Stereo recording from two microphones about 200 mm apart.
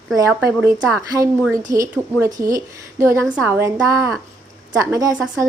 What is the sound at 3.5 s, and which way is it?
A woman's voice, 10° right (ahead or behind).